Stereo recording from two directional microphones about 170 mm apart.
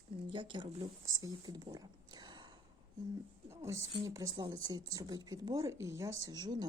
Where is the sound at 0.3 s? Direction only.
30° right (ahead or behind).